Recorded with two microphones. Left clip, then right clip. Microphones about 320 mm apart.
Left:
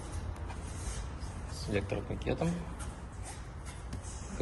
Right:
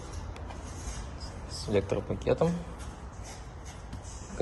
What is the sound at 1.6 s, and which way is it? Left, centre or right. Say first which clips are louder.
Speech: right 6 dB; centre.